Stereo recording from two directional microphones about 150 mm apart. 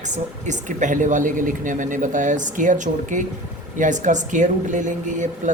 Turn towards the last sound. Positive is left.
turn(degrees=-55)  # may be behind; listen again after turning